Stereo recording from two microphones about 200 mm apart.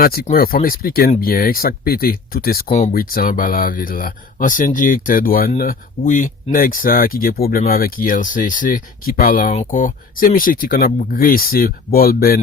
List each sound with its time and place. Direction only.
0.0 s speech: 50° left (ahead or behind)